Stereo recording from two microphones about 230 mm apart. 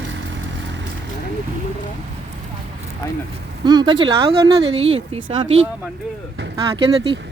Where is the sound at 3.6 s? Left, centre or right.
Centre.